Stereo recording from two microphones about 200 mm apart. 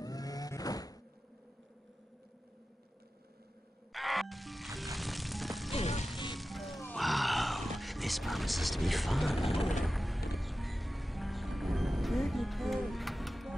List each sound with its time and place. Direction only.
0.0 s a sound: 20° left (ahead or behind)
3.9 s music: centre (ahead or behind)
5.7 s music: 35° left (ahead or behind)
6.3 s music: centre (ahead or behind)